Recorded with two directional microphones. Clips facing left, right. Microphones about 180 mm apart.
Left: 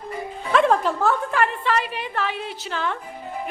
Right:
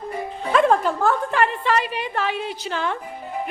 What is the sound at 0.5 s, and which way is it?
A woman's voice, centre (ahead or behind).